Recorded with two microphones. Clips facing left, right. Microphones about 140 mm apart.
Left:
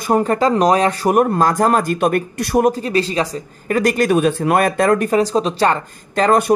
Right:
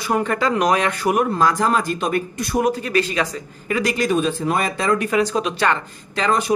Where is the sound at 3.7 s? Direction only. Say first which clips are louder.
Left 5 dB; 50° left (ahead or behind).